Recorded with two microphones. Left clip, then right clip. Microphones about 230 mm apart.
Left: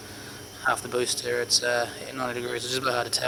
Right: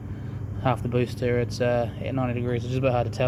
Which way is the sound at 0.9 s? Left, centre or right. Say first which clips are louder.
Right 1 dB; centre.